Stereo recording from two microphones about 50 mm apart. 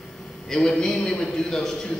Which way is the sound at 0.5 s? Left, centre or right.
Centre.